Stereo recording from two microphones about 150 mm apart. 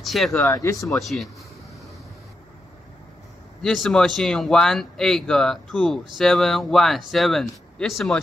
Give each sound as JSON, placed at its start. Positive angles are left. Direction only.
{"t": 0.0, "sound": "speech", "side_deg": 0}
{"t": 0.4, "sound": "speech", "side_deg": 15}
{"t": 0.8, "sound": "speech", "side_deg": 0}
{"t": 3.6, "sound": "speech", "side_deg": 5}